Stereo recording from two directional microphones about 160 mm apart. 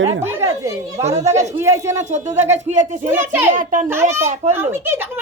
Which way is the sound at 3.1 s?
15° right (ahead or behind).